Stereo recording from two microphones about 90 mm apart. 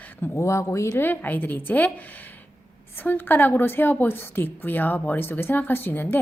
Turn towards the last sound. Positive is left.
turn(degrees=25)  # may be behind; listen again after turning